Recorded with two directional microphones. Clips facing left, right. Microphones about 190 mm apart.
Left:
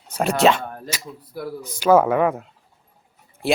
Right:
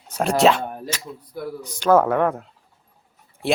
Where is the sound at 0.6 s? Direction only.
15° right (ahead or behind).